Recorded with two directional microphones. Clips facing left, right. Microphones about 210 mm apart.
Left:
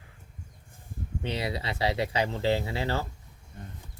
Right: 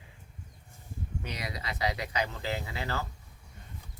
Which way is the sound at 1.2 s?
30° left (ahead or behind).